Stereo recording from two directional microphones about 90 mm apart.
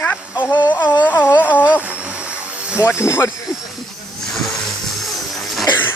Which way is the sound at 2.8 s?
25° left (ahead or behind).